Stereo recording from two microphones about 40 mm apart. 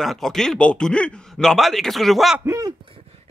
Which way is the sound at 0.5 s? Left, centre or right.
Left.